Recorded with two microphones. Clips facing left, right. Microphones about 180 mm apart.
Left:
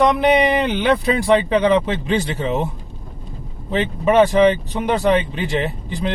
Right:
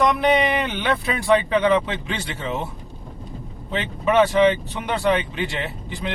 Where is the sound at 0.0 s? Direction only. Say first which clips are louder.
Left 4 dB; 30° left (ahead or behind).